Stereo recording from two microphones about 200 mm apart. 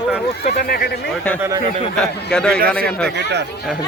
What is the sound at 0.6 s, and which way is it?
Speech, 50° left (ahead or behind).